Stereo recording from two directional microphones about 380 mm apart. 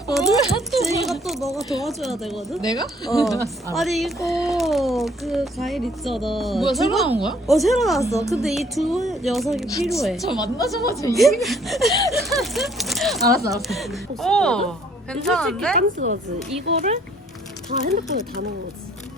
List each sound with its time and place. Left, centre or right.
0.7 s speech: centre
2.6 s speech: centre
10.4 s speech: centre
15.7 s speech: right